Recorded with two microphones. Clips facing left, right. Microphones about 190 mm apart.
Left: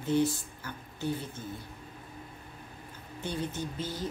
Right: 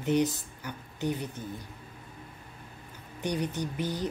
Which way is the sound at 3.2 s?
15° right (ahead or behind).